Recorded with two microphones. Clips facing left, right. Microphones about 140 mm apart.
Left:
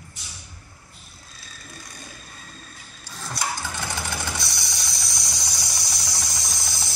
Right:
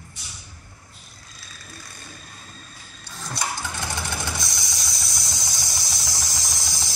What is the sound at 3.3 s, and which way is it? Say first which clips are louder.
Engine: even; 10° left (ahead or behind).